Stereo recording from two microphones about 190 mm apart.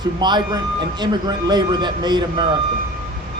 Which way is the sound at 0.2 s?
25° right (ahead or behind).